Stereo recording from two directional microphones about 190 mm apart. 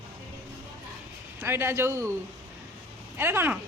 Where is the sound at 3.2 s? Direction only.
10° right (ahead or behind).